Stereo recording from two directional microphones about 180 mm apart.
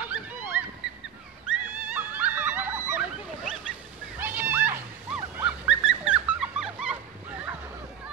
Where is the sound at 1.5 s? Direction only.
10° right (ahead or behind).